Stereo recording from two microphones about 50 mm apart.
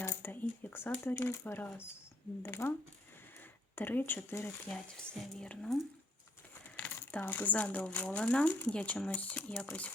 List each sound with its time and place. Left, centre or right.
0.0 s a sound: left
0.3 s a sound: left
1.0 s speech: left
3.8 s speech: left
4.7 s speech: centre
5.4 s speech: centre
6.7 s speech: left